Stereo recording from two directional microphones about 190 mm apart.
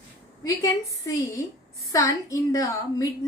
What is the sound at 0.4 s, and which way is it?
A woman's voice, 15° left (ahead or behind).